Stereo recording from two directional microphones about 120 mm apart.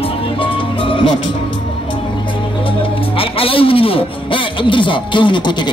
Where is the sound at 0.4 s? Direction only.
45° left (ahead or behind).